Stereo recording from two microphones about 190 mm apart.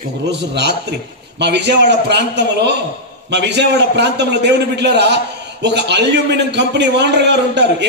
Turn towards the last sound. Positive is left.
turn(degrees=-65)  # may be behind; listen again after turning